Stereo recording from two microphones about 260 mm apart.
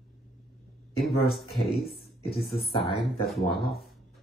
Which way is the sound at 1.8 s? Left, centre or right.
Left.